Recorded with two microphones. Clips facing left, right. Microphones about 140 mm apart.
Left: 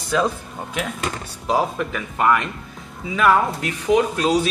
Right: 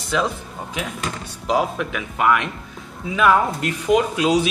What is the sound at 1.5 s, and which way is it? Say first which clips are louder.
Speech: even; centre (ahead or behind).